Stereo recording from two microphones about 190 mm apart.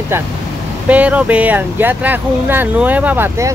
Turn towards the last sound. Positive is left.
turn(degrees=-10)  # may be behind; listen again after turning